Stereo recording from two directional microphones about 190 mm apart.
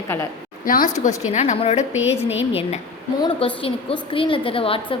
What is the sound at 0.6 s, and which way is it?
A woman's voice, 45° left (ahead or behind).